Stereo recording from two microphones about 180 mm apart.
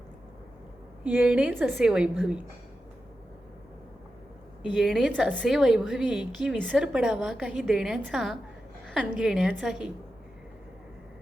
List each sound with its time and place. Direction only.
1.0 s a woman's voice: 10° right (ahead or behind)
4.6 s a woman's voice: 5° right (ahead or behind)